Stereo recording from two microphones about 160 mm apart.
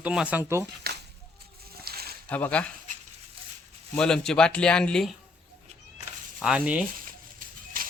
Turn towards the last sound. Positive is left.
turn(degrees=-60)  # may be behind; listen again after turning